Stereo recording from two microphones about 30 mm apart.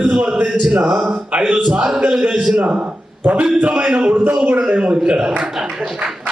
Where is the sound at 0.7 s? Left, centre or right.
Right.